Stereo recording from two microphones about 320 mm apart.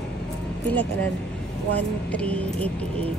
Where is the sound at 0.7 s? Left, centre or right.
Centre.